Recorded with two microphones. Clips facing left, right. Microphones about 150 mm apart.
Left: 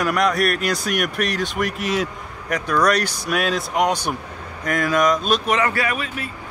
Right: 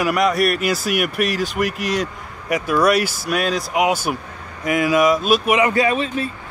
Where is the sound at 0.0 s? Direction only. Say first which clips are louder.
Right 2 dB; centre (ahead or behind).